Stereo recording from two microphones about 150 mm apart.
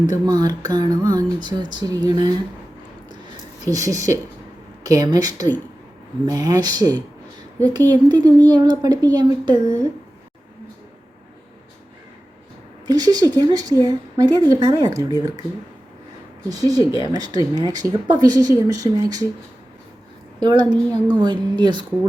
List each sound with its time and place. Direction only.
0.1 s speech: 25° right (ahead or behind)
3.6 s speech: 25° right (ahead or behind)
12.9 s speech: 25° right (ahead or behind)
16.5 s speech: 25° right (ahead or behind)
20.4 s a woman's voice: 30° right (ahead or behind)